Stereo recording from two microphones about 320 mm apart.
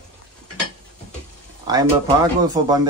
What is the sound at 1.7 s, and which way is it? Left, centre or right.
Speech, centre.